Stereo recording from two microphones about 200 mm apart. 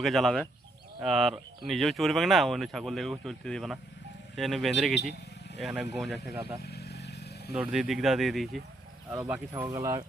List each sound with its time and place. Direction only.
0.0 s speech: centre (ahead or behind)
6.7 s vehicle: 55° left (ahead or behind)
7.5 s speech: 5° right (ahead or behind)
9.0 s speech: 10° right (ahead or behind)